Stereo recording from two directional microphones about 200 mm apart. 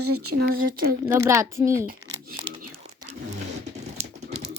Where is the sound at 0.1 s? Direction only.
90° right.